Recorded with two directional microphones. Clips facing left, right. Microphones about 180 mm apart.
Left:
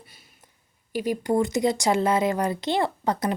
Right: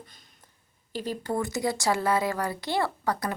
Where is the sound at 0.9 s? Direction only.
10° left (ahead or behind).